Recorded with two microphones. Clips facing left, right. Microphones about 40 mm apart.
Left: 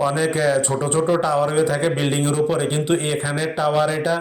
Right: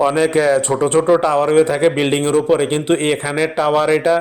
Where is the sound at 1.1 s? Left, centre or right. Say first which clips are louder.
Right 6 dB; right.